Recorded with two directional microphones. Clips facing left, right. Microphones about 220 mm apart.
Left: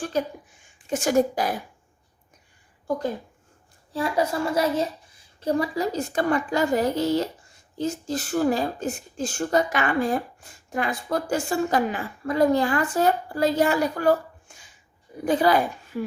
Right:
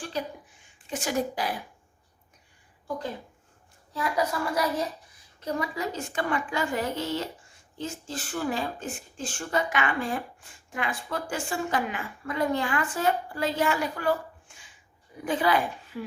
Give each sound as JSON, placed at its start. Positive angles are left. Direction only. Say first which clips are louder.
{"t": 0.0, "sound": "a woman's voice", "louder": "left 7 dB", "side_deg": 45}
{"t": 3.9, "sound": "a woman's voice", "louder": "left 4 dB", "side_deg": 30}